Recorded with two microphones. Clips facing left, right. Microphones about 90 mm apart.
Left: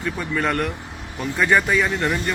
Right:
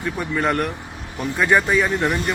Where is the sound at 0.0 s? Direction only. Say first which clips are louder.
Right 1 dB; 5° right (ahead or behind).